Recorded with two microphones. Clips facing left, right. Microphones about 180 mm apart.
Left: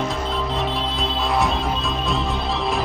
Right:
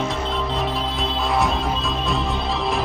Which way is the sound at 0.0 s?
Centre (ahead or behind).